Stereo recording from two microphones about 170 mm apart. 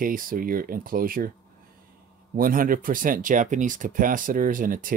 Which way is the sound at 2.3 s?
55° right (ahead or behind).